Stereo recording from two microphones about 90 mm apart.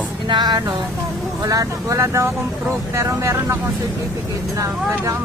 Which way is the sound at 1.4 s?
40° right (ahead or behind).